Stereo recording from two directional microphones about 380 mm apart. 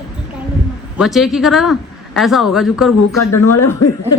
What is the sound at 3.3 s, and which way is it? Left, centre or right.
Speech, left.